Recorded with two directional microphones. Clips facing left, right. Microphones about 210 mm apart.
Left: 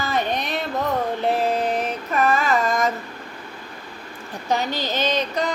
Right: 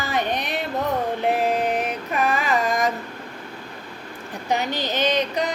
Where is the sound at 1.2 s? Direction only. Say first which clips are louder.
Even; 15° right (ahead or behind).